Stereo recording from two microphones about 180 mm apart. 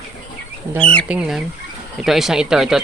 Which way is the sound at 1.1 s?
5° right (ahead or behind).